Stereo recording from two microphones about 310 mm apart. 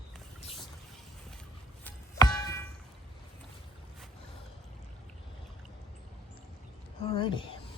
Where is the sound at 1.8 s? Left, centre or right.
Centre.